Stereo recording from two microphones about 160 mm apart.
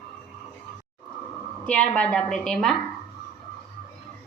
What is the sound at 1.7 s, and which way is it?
A woman's voice, 10° left (ahead or behind).